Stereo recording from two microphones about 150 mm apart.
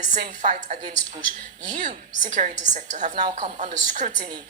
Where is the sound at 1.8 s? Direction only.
55° right (ahead or behind).